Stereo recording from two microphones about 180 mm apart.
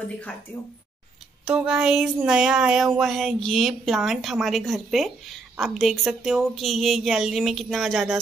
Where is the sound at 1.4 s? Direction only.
5° right (ahead or behind).